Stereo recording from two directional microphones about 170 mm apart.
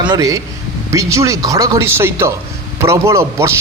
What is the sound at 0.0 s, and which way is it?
A man's voice, 20° right (ahead or behind).